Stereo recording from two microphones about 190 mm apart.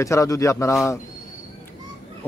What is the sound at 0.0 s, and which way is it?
Speech, 15° left (ahead or behind).